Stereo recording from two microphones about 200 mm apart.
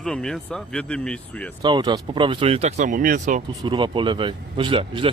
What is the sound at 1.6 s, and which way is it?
Speech, 20° right (ahead or behind).